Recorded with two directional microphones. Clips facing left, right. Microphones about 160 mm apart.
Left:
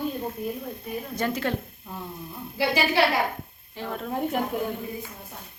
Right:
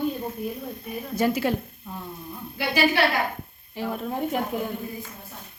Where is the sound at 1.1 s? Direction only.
10° right (ahead or behind).